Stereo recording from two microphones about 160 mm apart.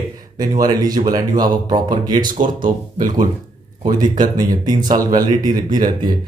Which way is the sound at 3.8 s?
25° right (ahead or behind).